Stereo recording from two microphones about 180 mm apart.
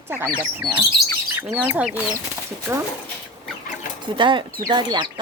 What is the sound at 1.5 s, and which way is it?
Speech, 10° right (ahead or behind).